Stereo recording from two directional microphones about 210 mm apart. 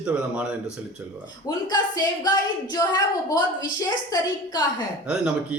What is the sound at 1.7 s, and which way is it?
A woman's voice, 20° left (ahead or behind).